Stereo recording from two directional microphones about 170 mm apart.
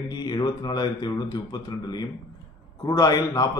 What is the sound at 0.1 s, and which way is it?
A man's voice, 25° left (ahead or behind).